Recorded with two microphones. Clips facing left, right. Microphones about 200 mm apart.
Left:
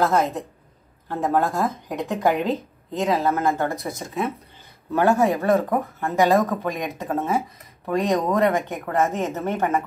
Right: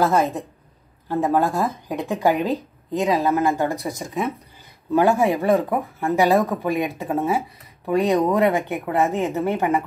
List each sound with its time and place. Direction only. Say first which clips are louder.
0.0 s speech: right 1 dB; 15° right (ahead or behind)
8.1 s speech: right 2 dB; centre (ahead or behind)
8.4 s speech: right 1 dB; 15° right (ahead or behind)